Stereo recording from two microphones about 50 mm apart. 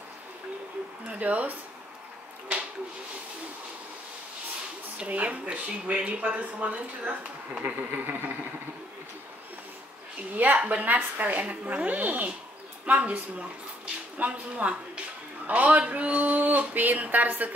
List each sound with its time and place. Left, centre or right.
1.0 s speech: right
4.9 s speech: right
7.9 s speech: right
10.3 s a sound: right
14.1 s speech: right
15.4 s a sound: right